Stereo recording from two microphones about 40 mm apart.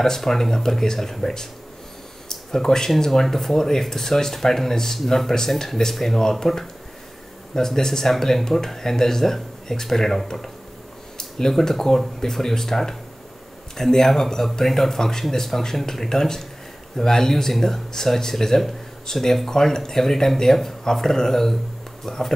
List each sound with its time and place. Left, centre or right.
0.0 s speech: centre
2.2 s a sound: centre
3.0 s speech: centre